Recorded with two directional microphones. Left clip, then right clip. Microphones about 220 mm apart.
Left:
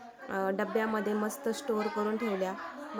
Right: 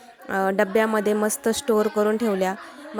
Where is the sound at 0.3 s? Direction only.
30° right (ahead or behind).